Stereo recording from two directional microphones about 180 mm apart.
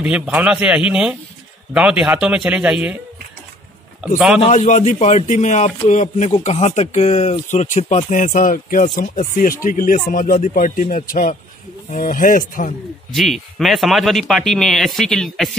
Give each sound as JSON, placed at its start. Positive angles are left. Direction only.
{"t": 0.0, "sound": "a man's voice", "side_deg": -5}
{"t": 4.4, "sound": "a man's voice", "side_deg": 40}
{"t": 13.1, "sound": "speech", "side_deg": 0}